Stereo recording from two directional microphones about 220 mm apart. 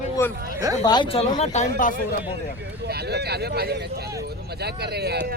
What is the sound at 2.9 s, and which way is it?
Speech, 45° right (ahead or behind).